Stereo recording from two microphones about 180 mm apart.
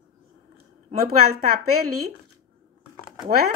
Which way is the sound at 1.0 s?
55° right (ahead or behind).